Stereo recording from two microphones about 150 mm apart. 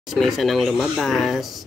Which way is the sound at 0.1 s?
Centre (ahead or behind).